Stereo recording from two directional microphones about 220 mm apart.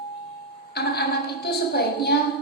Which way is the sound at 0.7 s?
45° left (ahead or behind).